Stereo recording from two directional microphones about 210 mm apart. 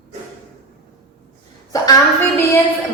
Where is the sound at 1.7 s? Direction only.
15° left (ahead or behind).